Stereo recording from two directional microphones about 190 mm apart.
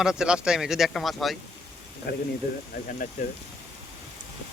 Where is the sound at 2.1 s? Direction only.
55° left (ahead or behind).